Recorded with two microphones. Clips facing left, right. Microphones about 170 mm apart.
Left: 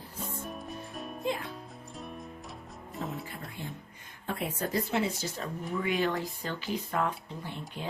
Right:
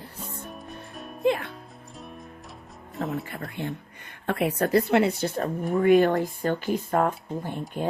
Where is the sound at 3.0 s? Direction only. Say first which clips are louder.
Right 7 dB; 65° right (ahead or behind).